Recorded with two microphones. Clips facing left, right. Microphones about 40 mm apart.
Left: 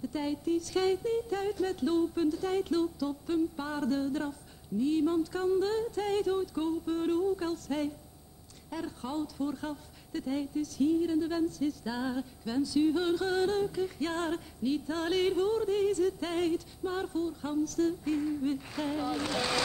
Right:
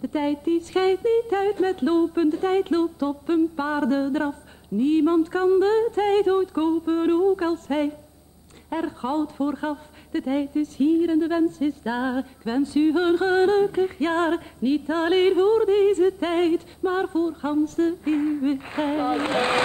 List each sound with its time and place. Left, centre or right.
0.0 s a woman's voice: right